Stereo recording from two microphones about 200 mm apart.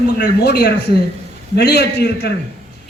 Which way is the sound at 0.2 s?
55° left (ahead or behind).